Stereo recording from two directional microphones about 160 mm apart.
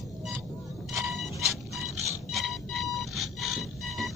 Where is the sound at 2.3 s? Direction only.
Centre (ahead or behind).